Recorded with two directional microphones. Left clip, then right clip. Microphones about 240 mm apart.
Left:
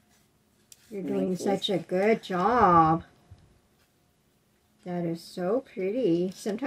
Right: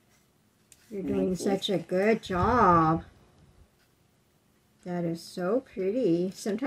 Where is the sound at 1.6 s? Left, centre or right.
Centre.